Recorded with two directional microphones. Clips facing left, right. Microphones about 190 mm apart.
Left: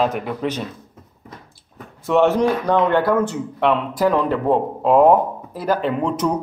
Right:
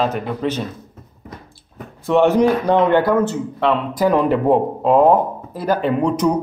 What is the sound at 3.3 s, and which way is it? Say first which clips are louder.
Speech: right 1 dB; 10° left (ahead or behind).